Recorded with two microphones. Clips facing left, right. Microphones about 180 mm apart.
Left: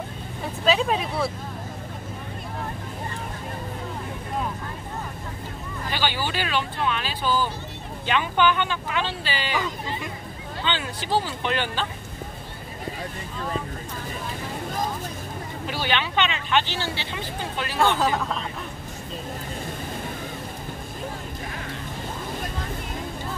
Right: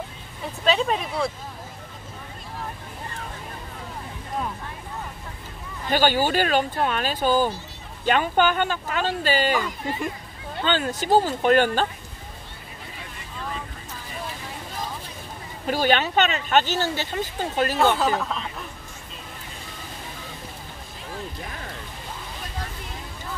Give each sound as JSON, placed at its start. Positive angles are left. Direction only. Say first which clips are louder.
{"t": 0.7, "sound": "speech", "louder": "even", "side_deg": 0}
{"t": 5.9, "sound": "speech", "louder": "right 7 dB", "side_deg": -45}
{"t": 10.6, "sound": "speech", "louder": "right 5 dB", "side_deg": -45}
{"t": 15.6, "sound": "speech", "louder": "right 6 dB", "side_deg": -45}
{"t": 17.9, "sound": "speech", "louder": "even", "side_deg": 0}